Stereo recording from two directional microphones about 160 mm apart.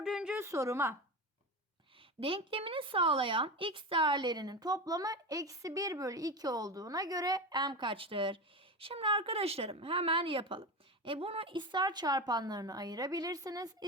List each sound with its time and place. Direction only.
0.0 s a sound: 5° right (ahead or behind)
0.4 s a woman's voice: 20° right (ahead or behind)
2.2 s a woman's voice: 35° right (ahead or behind)